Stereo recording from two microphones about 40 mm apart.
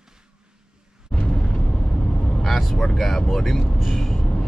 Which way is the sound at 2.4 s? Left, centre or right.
Centre.